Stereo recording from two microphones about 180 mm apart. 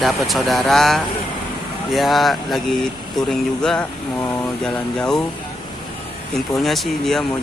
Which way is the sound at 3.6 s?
5° left (ahead or behind).